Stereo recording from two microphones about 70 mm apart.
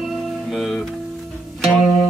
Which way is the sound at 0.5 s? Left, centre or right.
Centre.